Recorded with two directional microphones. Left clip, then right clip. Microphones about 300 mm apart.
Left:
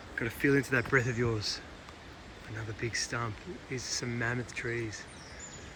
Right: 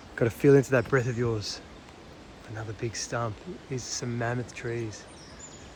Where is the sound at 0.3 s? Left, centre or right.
Centre.